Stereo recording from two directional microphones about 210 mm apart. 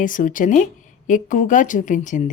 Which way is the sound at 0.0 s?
40° left (ahead or behind).